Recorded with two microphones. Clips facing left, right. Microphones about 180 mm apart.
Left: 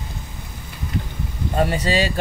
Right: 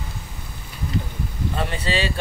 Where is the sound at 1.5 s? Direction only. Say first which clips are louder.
Left 6 dB; 40° left (ahead or behind).